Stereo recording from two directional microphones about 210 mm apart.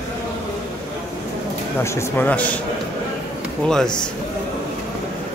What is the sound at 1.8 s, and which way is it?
Speech, 15° left (ahead or behind).